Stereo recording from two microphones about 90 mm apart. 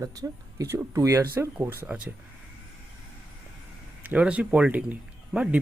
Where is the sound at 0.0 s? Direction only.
40° right (ahead or behind).